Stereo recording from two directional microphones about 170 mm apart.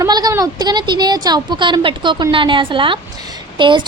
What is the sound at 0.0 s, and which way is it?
Speech, 20° right (ahead or behind).